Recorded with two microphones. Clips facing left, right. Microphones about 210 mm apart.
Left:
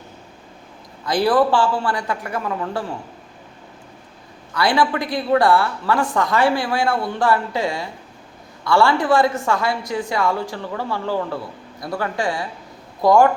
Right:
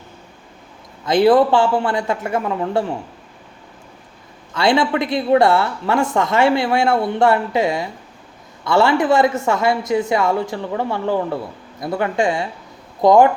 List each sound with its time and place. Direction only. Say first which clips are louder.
1.0 s a woman's voice: right 4 dB; 20° right (ahead or behind)
4.5 s a woman's voice: right 2 dB; 25° right (ahead or behind)